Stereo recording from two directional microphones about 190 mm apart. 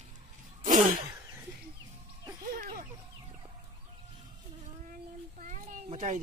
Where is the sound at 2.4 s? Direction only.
50° right (ahead or behind).